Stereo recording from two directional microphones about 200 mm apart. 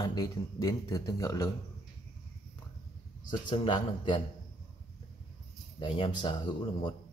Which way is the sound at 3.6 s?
25° left (ahead or behind).